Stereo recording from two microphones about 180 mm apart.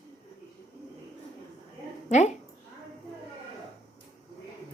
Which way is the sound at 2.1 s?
40° left (ahead or behind).